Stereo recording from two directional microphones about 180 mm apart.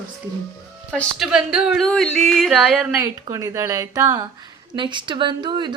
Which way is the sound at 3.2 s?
20° right (ahead or behind).